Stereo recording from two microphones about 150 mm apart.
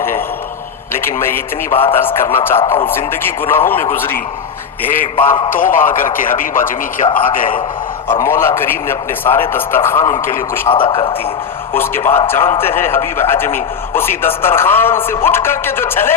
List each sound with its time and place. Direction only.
1.0 s a man's voice: 15° left (ahead or behind)
4.9 s a man's voice: 65° left (ahead or behind)
8.2 s a man's voice: 15° left (ahead or behind)
10.7 s speech: 35° left (ahead or behind)
11.7 s a man's voice: 15° left (ahead or behind)